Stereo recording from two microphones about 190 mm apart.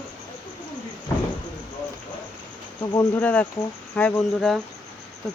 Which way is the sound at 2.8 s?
25° left (ahead or behind).